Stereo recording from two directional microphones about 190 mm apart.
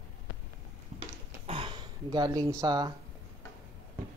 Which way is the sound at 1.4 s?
25° right (ahead or behind).